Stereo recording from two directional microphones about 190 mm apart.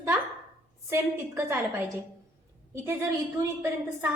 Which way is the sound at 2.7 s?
15° right (ahead or behind).